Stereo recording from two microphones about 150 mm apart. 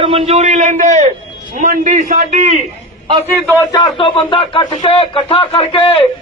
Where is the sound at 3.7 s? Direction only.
30° left (ahead or behind).